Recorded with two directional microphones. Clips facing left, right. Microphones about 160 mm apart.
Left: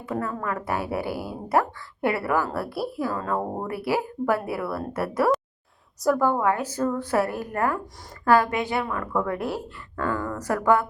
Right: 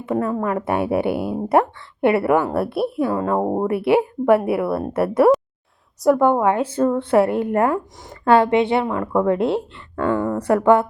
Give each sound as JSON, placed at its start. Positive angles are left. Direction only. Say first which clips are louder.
{"t": 0.0, "sound": "speech", "louder": "right 7 dB", "side_deg": -25}